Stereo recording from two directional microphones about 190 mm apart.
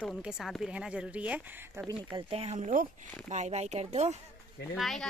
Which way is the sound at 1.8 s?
25° right (ahead or behind).